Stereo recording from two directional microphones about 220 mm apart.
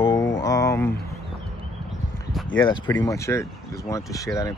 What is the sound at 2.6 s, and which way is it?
Speech, 20° left (ahead or behind).